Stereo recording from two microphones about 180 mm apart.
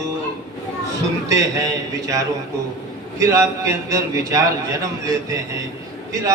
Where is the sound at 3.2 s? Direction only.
15° right (ahead or behind).